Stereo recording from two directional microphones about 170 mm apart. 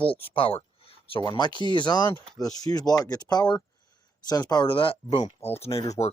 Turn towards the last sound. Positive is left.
turn(degrees=35)  # may be behind; listen again after turning